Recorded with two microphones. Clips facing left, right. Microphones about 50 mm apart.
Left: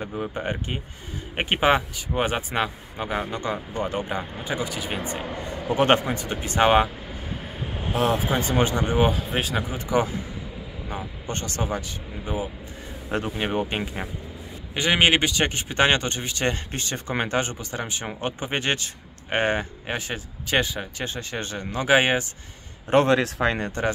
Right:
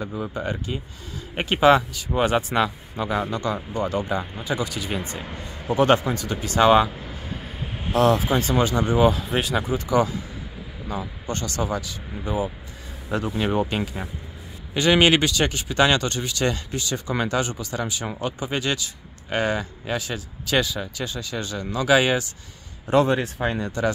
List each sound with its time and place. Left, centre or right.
0.2 s speech: left
5.8 s speech: left
7.9 s speech: centre
9.1 s speech: centre
9.7 s speech: left
13.4 s speech: left
23.0 s speech: left
23.6 s speech: left